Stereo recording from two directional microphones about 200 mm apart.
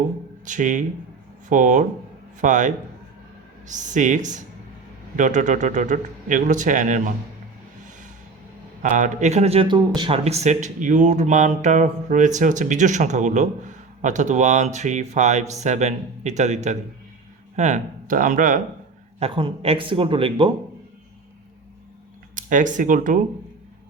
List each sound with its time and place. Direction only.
0.4 s speech: 40° right (ahead or behind)
8.8 s speech: 40° right (ahead or behind)
19.2 s speech: 25° right (ahead or behind)
22.4 s speech: 40° right (ahead or behind)